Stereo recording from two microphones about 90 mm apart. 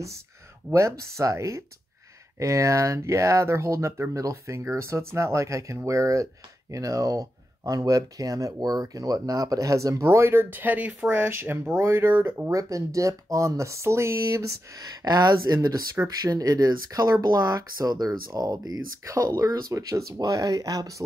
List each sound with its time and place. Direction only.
0.7 s speech: 35° right (ahead or behind)
12.5 s speech: 40° right (ahead or behind)